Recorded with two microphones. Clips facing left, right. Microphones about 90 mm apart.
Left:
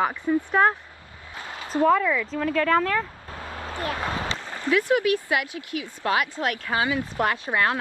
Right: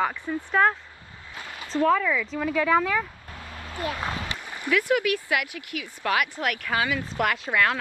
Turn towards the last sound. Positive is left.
turn(degrees=25)  # may be behind; listen again after turning